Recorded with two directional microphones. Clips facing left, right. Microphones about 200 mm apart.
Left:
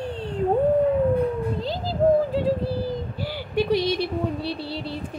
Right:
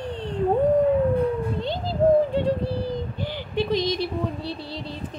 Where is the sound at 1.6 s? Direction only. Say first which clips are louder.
Even; centre (ahead or behind).